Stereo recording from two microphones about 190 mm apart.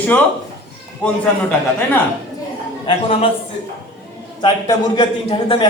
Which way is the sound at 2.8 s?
30° left (ahead or behind).